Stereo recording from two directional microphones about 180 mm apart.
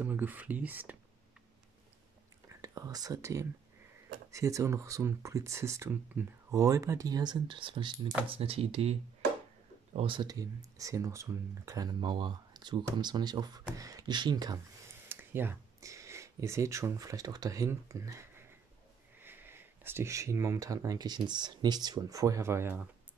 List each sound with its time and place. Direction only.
0.0 s speech: 10° right (ahead or behind)
2.6 s speech: 20° right (ahead or behind)
9.9 s speech: 25° right (ahead or behind)
15.0 s speech: 10° right (ahead or behind)